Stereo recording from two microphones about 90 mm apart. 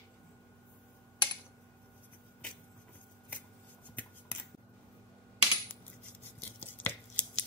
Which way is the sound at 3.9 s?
20° left (ahead or behind).